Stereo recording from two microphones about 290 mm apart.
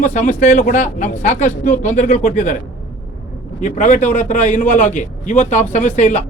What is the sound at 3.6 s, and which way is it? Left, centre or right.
A man's voice, left.